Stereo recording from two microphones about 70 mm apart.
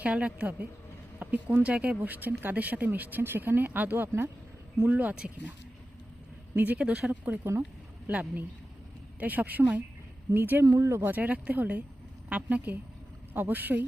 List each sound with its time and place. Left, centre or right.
0.0 s speech: centre
6.6 s speech: right
7.3 s speech: right
10.7 s speech: right
11.0 s speech: right